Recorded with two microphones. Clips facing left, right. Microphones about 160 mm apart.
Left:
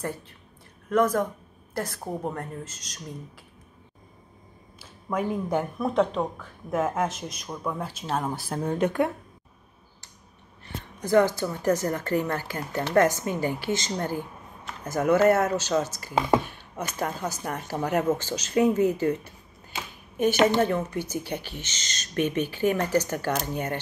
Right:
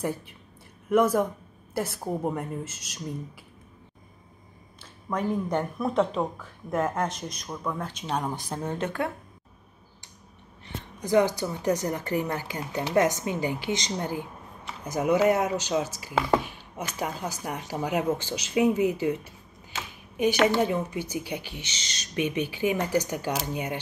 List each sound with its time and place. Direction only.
0.0 s speech: 10° right (ahead or behind)
5.1 s speech: 5° left (ahead or behind)
10.6 s speech: 15° right (ahead or behind)
16.4 s a sound: 10° right (ahead or behind)
17.0 s speech: 10° right (ahead or behind)
20.4 s speech: 10° right (ahead or behind)